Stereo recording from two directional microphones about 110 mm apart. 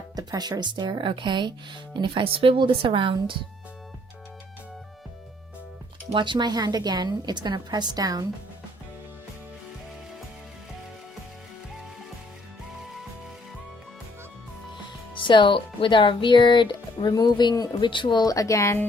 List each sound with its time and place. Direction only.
0.2 s speech: 35° right (ahead or behind)
6.1 s a woman's voice: 45° right (ahead or behind)
15.1 s speech: 45° left (ahead or behind); by 18.8 s 25° left (ahead or behind)